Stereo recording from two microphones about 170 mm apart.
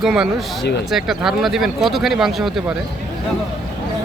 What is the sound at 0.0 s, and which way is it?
Speech, centre (ahead or behind).